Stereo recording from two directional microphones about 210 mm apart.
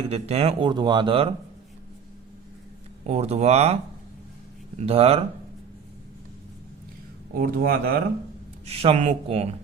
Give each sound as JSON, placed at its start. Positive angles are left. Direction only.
{"t": 0.1, "sound": "speech", "side_deg": -30}
{"t": 3.1, "sound": "speech", "side_deg": -30}
{"t": 4.8, "sound": "speech", "side_deg": -30}
{"t": 7.3, "sound": "speech", "side_deg": -45}
{"t": 8.6, "sound": "speech", "side_deg": -30}